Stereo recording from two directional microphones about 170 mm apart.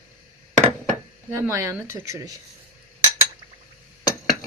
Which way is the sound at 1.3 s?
15° right (ahead or behind).